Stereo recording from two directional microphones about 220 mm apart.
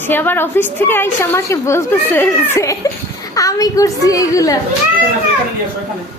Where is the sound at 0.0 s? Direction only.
10° left (ahead or behind).